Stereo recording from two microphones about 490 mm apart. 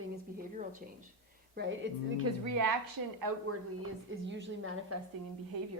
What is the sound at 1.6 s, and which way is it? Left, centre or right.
A woman's voice, right.